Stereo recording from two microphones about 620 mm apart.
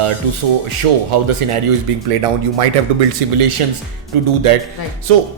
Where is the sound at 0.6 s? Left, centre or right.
Right.